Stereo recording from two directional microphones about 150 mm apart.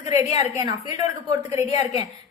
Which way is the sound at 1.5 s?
25° right (ahead or behind).